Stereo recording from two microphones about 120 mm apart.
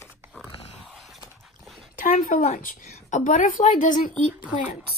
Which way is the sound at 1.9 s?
90° left.